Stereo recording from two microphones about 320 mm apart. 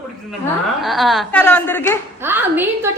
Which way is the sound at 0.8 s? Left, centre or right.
Centre.